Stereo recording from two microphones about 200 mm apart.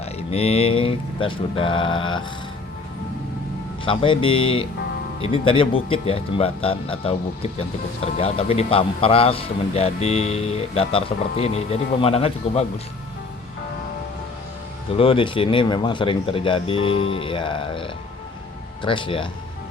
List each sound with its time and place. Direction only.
0.0 s speech: 30° left (ahead or behind)
3.8 s a man's voice: 25° left (ahead or behind)
14.9 s speech: 25° left (ahead or behind)